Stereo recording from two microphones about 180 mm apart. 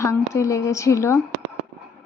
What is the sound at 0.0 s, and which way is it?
Speech, 15° left (ahead or behind).